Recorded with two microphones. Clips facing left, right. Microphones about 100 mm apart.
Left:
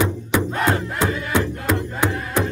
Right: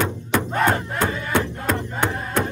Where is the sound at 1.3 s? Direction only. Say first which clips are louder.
Even; 15° left (ahead or behind).